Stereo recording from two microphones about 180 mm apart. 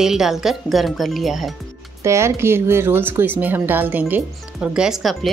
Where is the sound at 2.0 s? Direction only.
15° right (ahead or behind).